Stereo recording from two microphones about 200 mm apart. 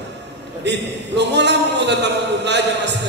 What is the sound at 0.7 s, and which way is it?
A man's voice, 60° right (ahead or behind).